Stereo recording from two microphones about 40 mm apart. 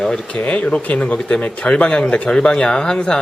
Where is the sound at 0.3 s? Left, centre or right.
Left.